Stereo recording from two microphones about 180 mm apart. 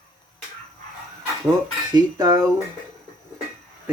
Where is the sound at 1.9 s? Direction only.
20° right (ahead or behind).